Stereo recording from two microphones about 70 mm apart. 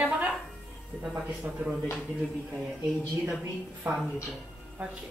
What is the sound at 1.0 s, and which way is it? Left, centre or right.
Speech, centre.